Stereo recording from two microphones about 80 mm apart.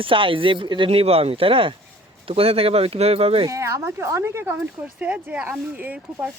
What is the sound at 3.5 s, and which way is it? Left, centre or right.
Speech, right.